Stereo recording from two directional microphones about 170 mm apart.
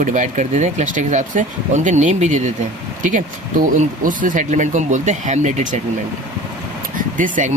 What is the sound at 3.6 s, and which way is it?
Speech, 50° right (ahead or behind).